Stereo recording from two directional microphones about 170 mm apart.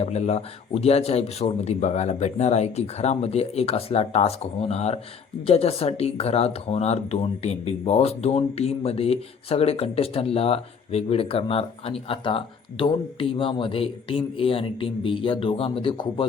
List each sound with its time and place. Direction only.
0.0 s speech: 40° left (ahead or behind)